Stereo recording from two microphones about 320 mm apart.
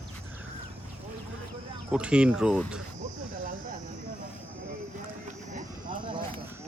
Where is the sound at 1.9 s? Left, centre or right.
Centre.